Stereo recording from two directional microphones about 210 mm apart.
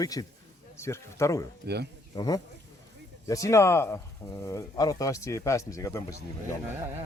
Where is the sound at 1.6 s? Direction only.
50° right (ahead or behind).